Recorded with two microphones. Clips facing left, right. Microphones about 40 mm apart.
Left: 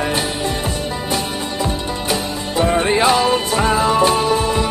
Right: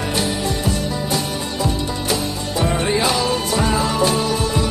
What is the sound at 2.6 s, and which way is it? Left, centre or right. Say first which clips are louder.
Music: left 4 dB; left.